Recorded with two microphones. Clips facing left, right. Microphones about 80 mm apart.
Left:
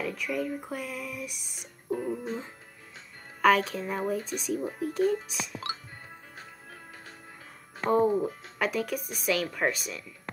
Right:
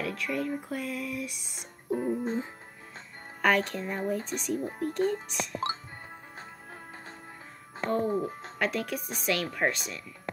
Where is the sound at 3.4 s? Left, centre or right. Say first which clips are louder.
Left 3 dB; centre.